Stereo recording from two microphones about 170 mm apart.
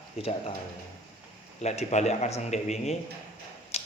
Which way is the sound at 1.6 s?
40° left (ahead or behind).